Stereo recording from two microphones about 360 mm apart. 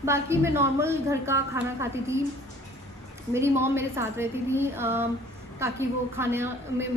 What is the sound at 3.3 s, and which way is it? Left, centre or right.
A woman's voice, centre.